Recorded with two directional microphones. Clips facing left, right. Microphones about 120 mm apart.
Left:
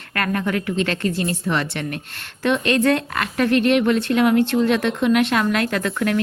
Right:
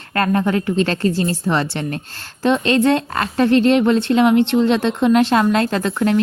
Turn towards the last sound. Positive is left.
turn(degrees=-25)  # may be behind; listen again after turning